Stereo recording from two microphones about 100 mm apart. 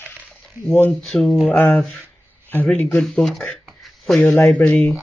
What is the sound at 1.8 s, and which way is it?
Speech, centre (ahead or behind).